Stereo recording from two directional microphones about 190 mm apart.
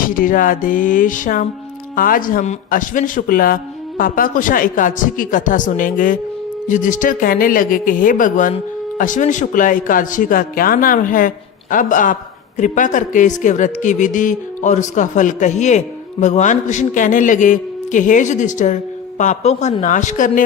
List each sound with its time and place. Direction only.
0.0 s speech: 45° left (ahead or behind)